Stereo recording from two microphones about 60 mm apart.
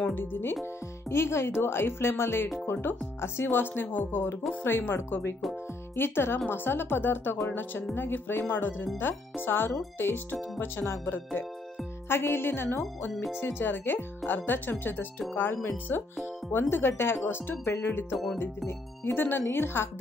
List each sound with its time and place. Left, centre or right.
0.1 s speech: left
1.0 s speech: left
18.1 s speech: centre
18.7 s speech: left